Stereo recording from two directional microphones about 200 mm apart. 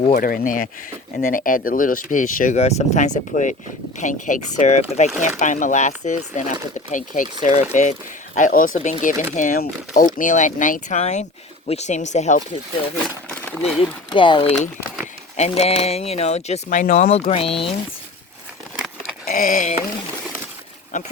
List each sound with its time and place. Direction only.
0.2 s speech: 45° left (ahead or behind)
14.1 s speech: 25° left (ahead or behind)
19.2 s a sound: 45° left (ahead or behind)